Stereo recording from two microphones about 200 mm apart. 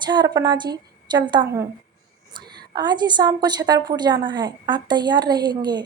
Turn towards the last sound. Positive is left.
turn(degrees=-20)  # may be behind; listen again after turning